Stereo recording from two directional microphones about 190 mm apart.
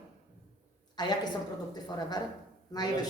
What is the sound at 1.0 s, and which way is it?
Speech, 20° left (ahead or behind).